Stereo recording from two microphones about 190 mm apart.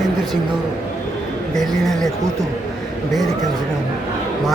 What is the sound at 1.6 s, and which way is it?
Speech, centre (ahead or behind).